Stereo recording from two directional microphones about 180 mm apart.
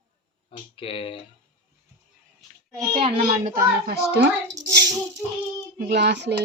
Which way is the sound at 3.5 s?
60° right (ahead or behind).